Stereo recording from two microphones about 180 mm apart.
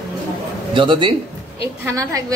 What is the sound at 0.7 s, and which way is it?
Speech, 25° right (ahead or behind).